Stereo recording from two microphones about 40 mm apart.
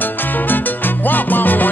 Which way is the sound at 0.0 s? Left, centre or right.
Left.